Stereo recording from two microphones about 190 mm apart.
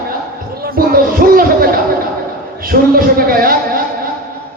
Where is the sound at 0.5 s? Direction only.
50° right (ahead or behind).